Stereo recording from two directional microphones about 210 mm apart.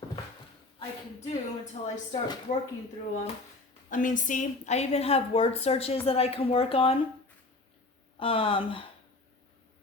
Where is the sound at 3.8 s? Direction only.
40° left (ahead or behind).